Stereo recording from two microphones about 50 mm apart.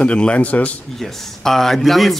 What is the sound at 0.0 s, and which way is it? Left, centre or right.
Speech, left.